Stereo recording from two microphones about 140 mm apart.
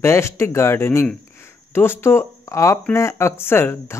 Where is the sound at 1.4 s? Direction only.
15° left (ahead or behind).